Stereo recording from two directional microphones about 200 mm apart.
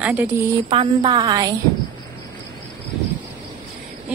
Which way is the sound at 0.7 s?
25° right (ahead or behind).